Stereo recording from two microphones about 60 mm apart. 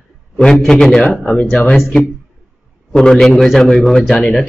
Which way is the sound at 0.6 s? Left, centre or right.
Centre.